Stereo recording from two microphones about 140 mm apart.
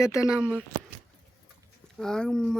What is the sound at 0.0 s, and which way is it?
Speech, 20° left (ahead or behind).